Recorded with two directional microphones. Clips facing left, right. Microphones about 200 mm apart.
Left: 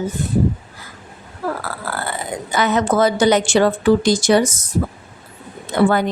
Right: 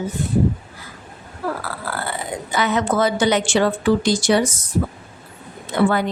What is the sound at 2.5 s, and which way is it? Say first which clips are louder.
A woman's voice: left 3 dB; 45° left (ahead or behind).